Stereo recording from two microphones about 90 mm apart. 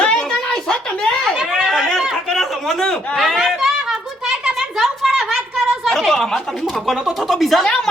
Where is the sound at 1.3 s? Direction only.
10° right (ahead or behind); by 3.2 s 5° left (ahead or behind).